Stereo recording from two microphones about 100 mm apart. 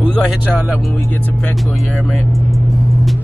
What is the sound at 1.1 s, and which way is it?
Music, 15° left (ahead or behind).